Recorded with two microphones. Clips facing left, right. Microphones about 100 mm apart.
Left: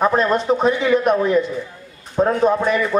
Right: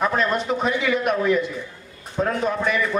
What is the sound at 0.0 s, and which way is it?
A man's voice, 30° left (ahead or behind).